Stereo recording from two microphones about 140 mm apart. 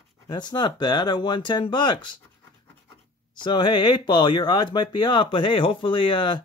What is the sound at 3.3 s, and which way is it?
Speech, 35° left (ahead or behind).